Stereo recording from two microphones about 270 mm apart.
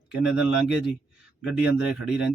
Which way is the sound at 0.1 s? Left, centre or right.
Centre.